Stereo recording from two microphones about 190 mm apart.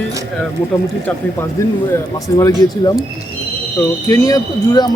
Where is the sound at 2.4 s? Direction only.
15° left (ahead or behind).